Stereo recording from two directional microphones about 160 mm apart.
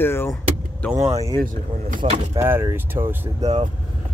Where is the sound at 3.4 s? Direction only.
40° right (ahead or behind).